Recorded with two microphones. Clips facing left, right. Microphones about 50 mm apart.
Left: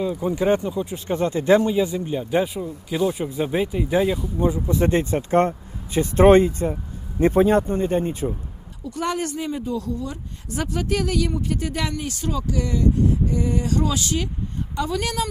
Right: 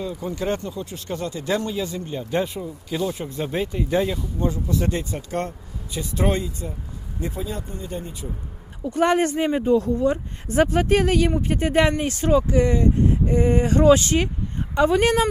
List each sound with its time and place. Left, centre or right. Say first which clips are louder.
0.0 s speech: left 5 dB; centre
4.7 s speech: left 5 dB; left
8.8 s speech: right 6 dB; right